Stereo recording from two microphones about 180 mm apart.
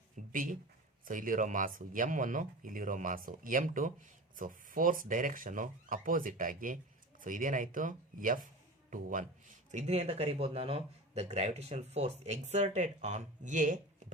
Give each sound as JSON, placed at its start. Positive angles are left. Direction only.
{"t": 0.2, "sound": "speech", "side_deg": -45}